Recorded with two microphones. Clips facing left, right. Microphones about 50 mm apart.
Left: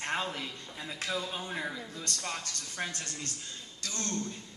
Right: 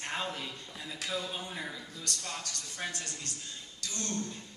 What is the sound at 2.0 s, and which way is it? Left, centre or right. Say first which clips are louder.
Speech: left 1 dB; left.